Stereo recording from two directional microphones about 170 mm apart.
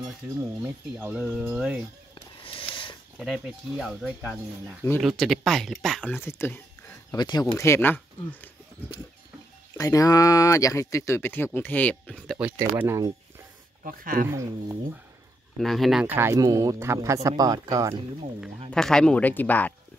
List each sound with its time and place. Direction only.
0.0 s speech: 20° right (ahead or behind)
2.4 s a sound: 30° left (ahead or behind)
3.2 s speech: centre (ahead or behind)
6.2 s speech: 15° left (ahead or behind)
7.1 s speech: 25° left (ahead or behind)
9.8 s speech: 20° left (ahead or behind)
12.4 s speech: 10° right (ahead or behind)
13.8 s speech: 55° right (ahead or behind)
14.3 s speech: 15° right (ahead or behind)
15.5 s speech: centre (ahead or behind); by 18.0 s 20° right (ahead or behind)
18.7 s speech: 5° left (ahead or behind)